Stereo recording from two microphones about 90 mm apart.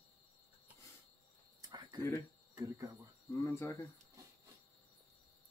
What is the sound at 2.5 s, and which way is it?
Speech, 40° right (ahead or behind).